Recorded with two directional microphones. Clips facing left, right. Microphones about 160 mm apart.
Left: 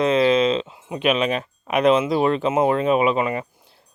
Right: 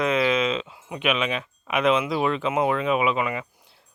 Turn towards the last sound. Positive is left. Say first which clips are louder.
# left 4 dB
turn(degrees=35)  # may be behind; listen again after turning